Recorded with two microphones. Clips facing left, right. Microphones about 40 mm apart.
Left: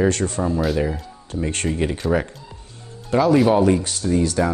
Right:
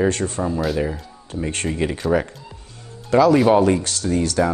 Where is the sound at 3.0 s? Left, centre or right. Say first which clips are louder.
Right 2 dB; right.